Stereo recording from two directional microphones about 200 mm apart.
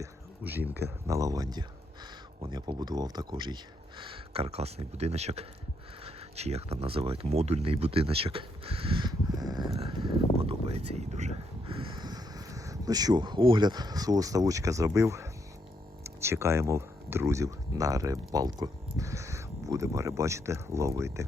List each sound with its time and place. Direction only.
0.0 s speech: 10° right (ahead or behind)